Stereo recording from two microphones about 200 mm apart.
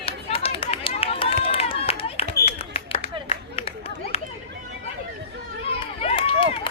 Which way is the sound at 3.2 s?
30° left (ahead or behind).